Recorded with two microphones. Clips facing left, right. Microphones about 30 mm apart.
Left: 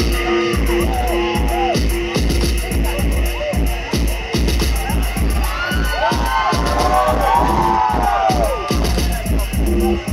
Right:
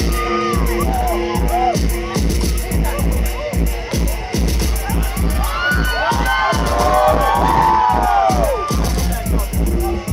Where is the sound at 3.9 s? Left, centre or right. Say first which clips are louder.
Left 3 dB; left.